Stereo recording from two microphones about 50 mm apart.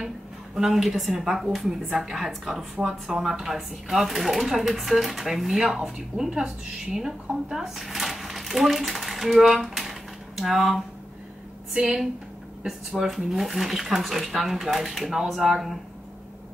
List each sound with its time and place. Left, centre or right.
0.6 s speech: centre
11.7 s speech: centre